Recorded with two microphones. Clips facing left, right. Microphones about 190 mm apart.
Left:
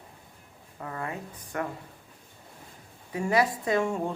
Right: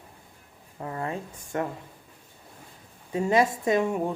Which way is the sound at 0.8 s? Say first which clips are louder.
Right 3 dB; 25° right (ahead or behind).